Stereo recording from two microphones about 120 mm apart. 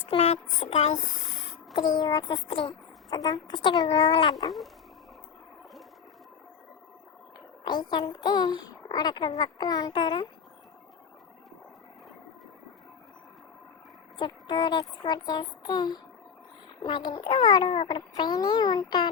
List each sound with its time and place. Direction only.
0.1 s a sound: 55° left (ahead or behind)
1.7 s a child's voice: 35° left (ahead or behind)
7.6 s a child's voice: 40° left (ahead or behind)
14.2 s a woman's voice: 40° left (ahead or behind)